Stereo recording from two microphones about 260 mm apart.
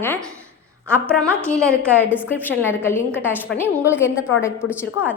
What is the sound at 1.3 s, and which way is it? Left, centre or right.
A woman's voice, centre.